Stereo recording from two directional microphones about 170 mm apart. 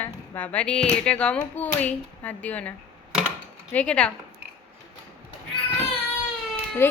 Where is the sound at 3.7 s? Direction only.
10° left (ahead or behind).